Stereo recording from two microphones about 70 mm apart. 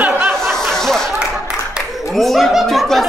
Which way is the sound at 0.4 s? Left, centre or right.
Centre.